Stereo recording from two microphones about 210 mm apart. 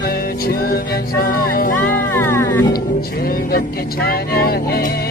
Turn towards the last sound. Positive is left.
turn(degrees=45)  # may be behind; listen again after turning